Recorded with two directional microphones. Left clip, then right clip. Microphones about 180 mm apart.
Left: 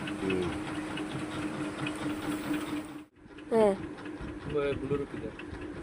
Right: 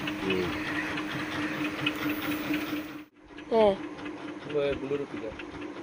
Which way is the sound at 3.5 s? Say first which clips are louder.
Right 2 dB; 30° left (ahead or behind).